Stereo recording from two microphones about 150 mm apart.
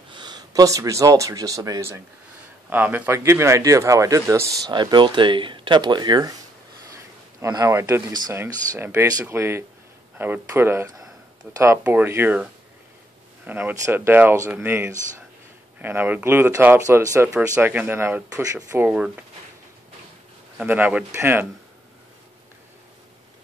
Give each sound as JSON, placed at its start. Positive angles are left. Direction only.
{"t": 0.1, "sound": "speech", "side_deg": -30}
{"t": 13.5, "sound": "speech", "side_deg": -10}
{"t": 18.8, "sound": "speech", "side_deg": -5}
{"t": 20.5, "sound": "speech", "side_deg": -10}